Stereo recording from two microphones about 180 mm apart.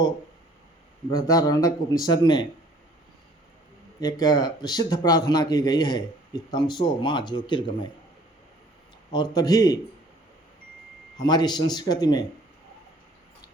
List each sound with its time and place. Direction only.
1.1 s speech: 20° left (ahead or behind)
4.0 s speech: 20° left (ahead or behind)
9.1 s speech: 20° left (ahead or behind)
11.2 s speech: 20° left (ahead or behind)